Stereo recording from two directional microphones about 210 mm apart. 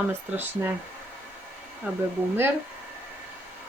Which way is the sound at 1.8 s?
5° right (ahead or behind).